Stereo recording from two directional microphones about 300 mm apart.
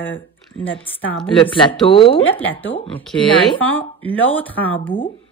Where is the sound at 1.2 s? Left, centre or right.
Centre.